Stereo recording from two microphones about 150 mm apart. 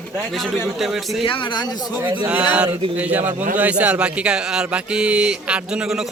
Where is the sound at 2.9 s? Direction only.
10° right (ahead or behind).